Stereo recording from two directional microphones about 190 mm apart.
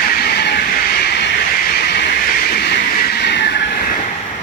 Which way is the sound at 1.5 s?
50° left (ahead or behind).